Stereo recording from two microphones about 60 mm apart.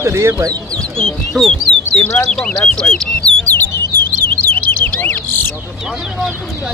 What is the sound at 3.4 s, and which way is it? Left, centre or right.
Bird, left.